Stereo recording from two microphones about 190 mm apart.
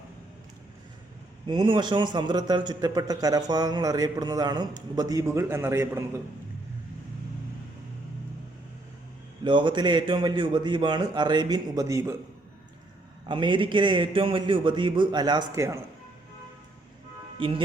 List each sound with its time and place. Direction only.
1.5 s a man's voice: 25° right (ahead or behind)
9.4 s a man's voice: 25° right (ahead or behind)
13.2 s a man's voice: 25° right (ahead or behind)
17.4 s a man's voice: 25° right (ahead or behind)